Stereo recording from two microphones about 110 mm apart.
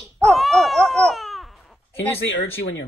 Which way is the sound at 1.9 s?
20° left (ahead or behind).